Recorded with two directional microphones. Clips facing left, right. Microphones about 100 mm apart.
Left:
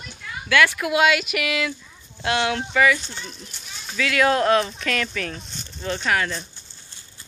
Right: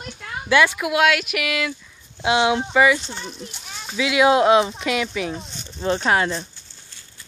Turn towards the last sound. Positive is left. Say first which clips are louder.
# right 3 dB
turn(degrees=-25)  # may be behind; listen again after turning